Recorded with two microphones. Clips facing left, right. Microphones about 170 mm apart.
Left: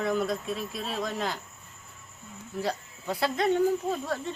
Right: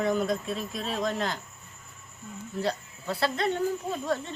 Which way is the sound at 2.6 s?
10° left (ahead or behind).